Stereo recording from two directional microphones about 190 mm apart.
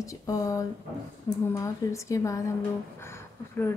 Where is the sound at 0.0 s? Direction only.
15° left (ahead or behind).